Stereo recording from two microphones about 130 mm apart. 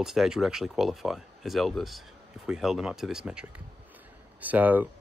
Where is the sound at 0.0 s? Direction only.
5° right (ahead or behind).